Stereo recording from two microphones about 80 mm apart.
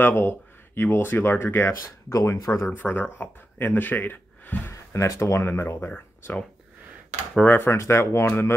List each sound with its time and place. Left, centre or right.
0.0 s speech: left
2.1 s speech: left
2.7 s speech: left
4.6 s speech: left
7.4 s speech: left